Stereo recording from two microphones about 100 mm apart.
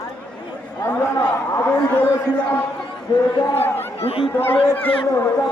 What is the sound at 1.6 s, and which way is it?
Speech, 20° left (ahead or behind).